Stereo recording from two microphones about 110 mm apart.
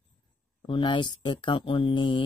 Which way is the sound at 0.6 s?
45° left (ahead or behind).